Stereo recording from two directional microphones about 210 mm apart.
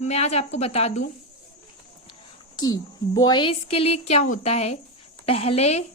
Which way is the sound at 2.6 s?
20° left (ahead or behind).